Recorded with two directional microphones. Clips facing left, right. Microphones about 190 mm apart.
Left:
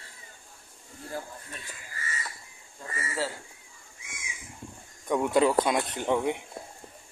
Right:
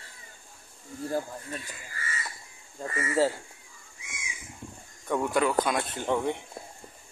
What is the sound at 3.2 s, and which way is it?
Speech, 45° right (ahead or behind).